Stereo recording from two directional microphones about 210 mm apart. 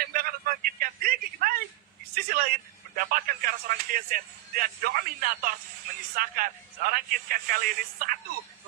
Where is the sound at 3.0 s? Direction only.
40° right (ahead or behind).